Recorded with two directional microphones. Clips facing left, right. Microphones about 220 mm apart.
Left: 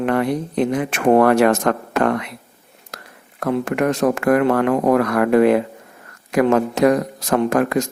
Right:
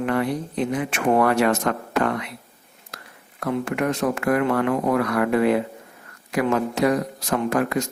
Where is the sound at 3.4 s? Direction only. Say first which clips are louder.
Left 4 dB; 45° left (ahead or behind).